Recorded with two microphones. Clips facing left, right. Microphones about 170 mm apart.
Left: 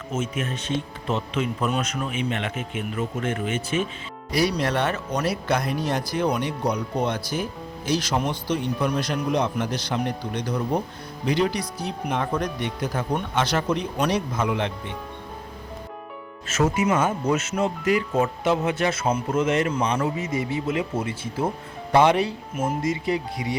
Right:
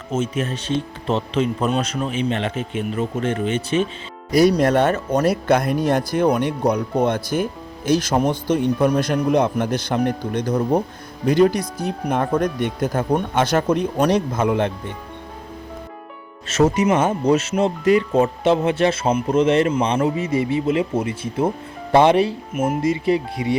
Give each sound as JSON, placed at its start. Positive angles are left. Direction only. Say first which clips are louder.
{"t": 0.1, "sound": "speech", "louder": "right 5 dB", "side_deg": -35}
{"t": 4.3, "sound": "speech", "louder": "right 8 dB", "side_deg": -45}
{"t": 16.6, "sound": "speech", "louder": "right 5 dB", "side_deg": -40}
{"t": 22.5, "sound": "speech", "louder": "right 5 dB", "side_deg": -5}
{"t": 23.0, "sound": "speech", "louder": "right 6 dB", "side_deg": -25}